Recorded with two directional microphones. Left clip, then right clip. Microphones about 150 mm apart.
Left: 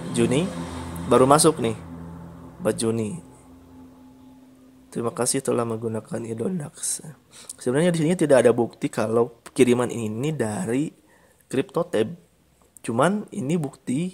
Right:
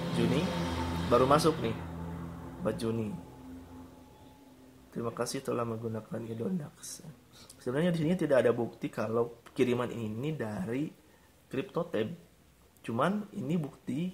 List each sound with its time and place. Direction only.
0.2 s speech: 55° left (ahead or behind)
4.9 s speech: 55° left (ahead or behind)